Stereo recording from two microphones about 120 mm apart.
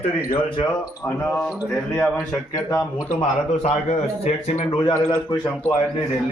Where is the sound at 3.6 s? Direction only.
70° left (ahead or behind).